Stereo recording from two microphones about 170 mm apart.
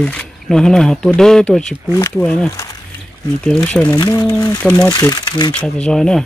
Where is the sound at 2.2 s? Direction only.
15° left (ahead or behind).